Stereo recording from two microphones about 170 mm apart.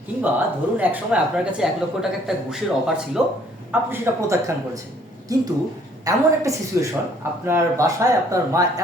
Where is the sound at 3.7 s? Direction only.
15° right (ahead or behind).